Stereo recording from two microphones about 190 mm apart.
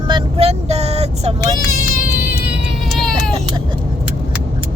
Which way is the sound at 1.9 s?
45° left (ahead or behind).